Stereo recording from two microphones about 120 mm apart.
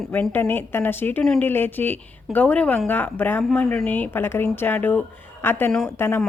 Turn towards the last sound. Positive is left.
turn(degrees=20)  # may be behind; listen again after turning